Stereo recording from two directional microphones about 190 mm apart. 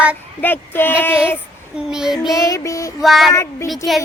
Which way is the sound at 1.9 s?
Centre (ahead or behind).